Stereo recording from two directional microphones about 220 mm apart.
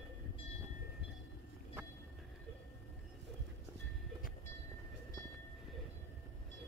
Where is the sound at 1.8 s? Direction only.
10° right (ahead or behind).